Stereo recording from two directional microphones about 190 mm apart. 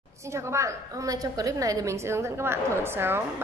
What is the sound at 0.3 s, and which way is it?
A woman's voice, 15° right (ahead or behind).